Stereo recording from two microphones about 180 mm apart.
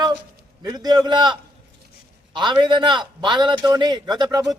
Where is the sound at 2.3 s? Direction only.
25° right (ahead or behind).